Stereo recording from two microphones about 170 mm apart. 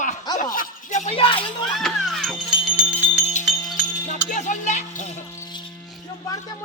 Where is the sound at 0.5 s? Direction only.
45° left (ahead or behind).